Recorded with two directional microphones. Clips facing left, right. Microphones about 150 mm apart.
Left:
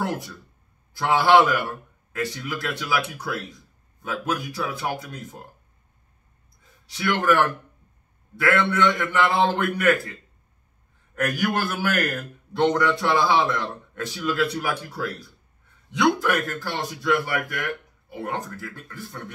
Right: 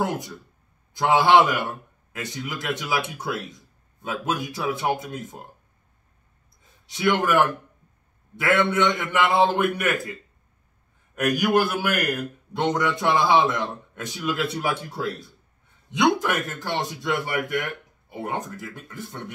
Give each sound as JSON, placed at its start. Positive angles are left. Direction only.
{"t": 0.9, "sound": "speech", "side_deg": -20}
{"t": 7.0, "sound": "speech", "side_deg": -20}
{"t": 8.4, "sound": "a man's voice", "side_deg": -20}
{"t": 11.1, "sound": "a man's voice", "side_deg": -15}